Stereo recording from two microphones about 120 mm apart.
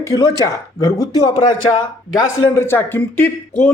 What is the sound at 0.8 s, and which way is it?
Speech, 35° left (ahead or behind).